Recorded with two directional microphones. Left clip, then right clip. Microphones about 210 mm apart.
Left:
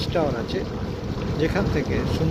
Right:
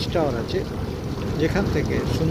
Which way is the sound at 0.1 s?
10° right (ahead or behind).